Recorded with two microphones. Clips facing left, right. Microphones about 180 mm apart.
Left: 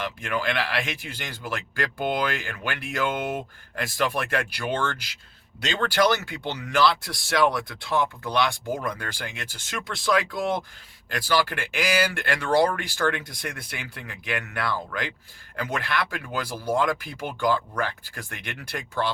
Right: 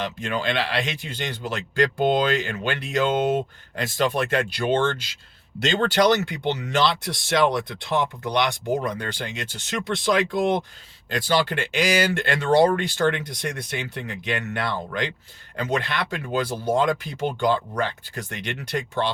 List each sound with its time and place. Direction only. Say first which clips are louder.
0.0 s speech: right 2 dB; 25° right (ahead or behind)